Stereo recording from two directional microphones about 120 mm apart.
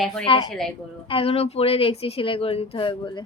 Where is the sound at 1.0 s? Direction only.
50° left (ahead or behind).